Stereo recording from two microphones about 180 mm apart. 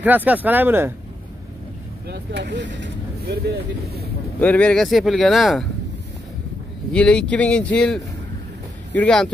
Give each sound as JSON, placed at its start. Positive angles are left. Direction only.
{"t": 0.0, "sound": "speech", "side_deg": -10}
{"t": 2.0, "sound": "speech", "side_deg": -70}
{"t": 4.4, "sound": "speech", "side_deg": 10}
{"t": 6.9, "sound": "speech", "side_deg": 5}